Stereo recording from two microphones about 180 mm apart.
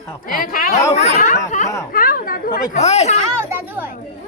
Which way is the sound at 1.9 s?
55° left (ahead or behind).